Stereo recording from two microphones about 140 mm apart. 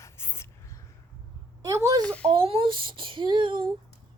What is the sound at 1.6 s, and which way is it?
Speech, 25° right (ahead or behind).